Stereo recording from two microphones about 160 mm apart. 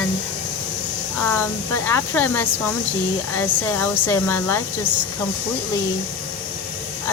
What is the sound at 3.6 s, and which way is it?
Speech, 15° left (ahead or behind).